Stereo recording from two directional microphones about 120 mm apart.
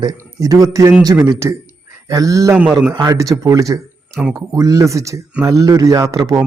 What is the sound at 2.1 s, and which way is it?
A man's voice, 25° right (ahead or behind).